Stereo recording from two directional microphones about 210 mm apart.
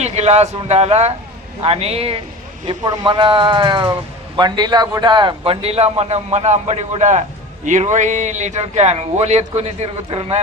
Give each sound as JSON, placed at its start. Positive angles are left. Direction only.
{"t": 0.0, "sound": "a man's voice", "side_deg": -30}